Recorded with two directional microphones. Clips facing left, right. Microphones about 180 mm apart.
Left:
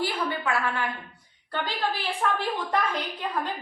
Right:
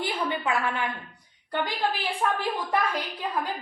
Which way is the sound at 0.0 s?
20° right (ahead or behind).